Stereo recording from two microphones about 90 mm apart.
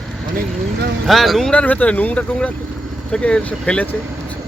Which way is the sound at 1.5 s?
15° left (ahead or behind).